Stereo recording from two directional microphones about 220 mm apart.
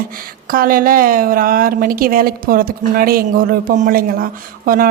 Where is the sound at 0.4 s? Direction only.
40° right (ahead or behind).